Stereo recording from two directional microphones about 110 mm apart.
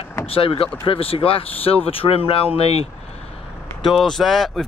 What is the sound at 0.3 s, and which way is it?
Speech, 55° left (ahead or behind).